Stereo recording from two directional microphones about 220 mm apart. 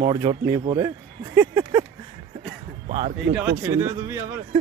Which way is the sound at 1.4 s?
10° right (ahead or behind).